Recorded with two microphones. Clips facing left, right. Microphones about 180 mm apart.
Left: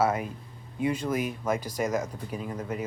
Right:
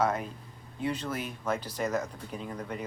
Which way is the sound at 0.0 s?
10° left (ahead or behind).